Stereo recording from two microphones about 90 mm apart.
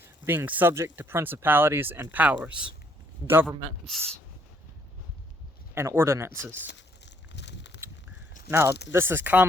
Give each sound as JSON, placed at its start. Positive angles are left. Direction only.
{"t": 0.3, "sound": "speech", "side_deg": -20}
{"t": 3.4, "sound": "a man's voice", "side_deg": 0}
{"t": 5.7, "sound": "speech", "side_deg": -25}
{"t": 8.4, "sound": "speech", "side_deg": -25}